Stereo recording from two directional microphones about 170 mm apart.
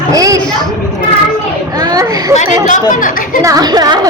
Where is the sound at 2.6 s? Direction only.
50° left (ahead or behind).